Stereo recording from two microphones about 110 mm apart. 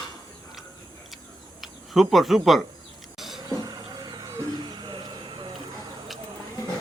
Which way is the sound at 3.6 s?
35° right (ahead or behind).